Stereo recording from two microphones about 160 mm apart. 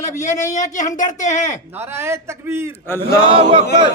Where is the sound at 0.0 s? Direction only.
50° left (ahead or behind).